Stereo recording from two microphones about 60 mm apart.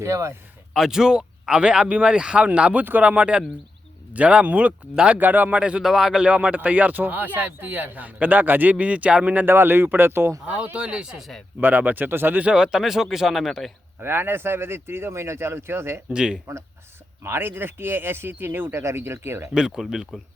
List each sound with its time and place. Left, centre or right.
0.0 s speech: right
0.7 s speech: centre
5.8 s speech: centre
6.2 s speech: right
9.5 s speech: right
10.4 s speech: right
11.2 s speech: centre
11.6 s speech: right
12.4 s speech: centre
14.0 s speech: right
16.1 s speech: centre
17.2 s speech: right
18.7 s speech: right
19.5 s speech: centre